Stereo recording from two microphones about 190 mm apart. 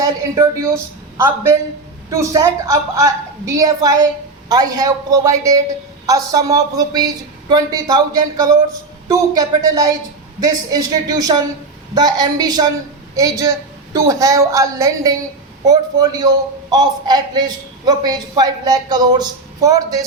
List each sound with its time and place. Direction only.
0.0 s a woman's voice: 15° right (ahead or behind)